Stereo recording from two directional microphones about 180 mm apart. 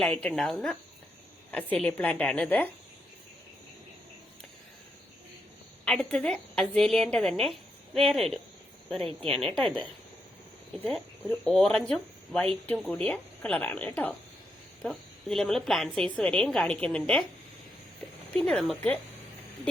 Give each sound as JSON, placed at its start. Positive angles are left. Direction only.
{"t": 0.0, "sound": "a woman's voice", "side_deg": 5}
{"t": 5.8, "sound": "a woman's voice", "side_deg": 5}
{"t": 11.3, "sound": "a woman's voice", "side_deg": 5}
{"t": 18.3, "sound": "a woman's voice", "side_deg": 5}